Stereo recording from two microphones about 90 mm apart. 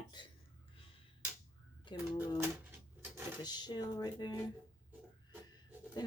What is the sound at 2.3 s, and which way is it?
Speech, 25° right (ahead or behind).